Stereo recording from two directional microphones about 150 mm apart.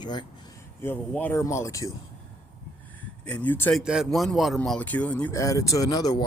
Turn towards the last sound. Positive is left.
turn(degrees=25)  # may be behind; listen again after turning